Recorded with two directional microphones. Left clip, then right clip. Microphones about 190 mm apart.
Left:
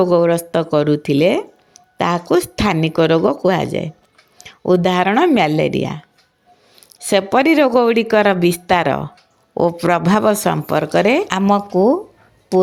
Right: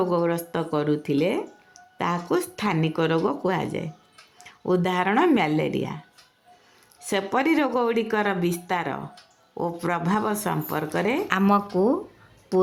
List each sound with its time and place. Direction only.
0.0 s speech: 35° left (ahead or behind)
7.0 s speech: 35° left (ahead or behind)
11.3 s speech: 20° left (ahead or behind)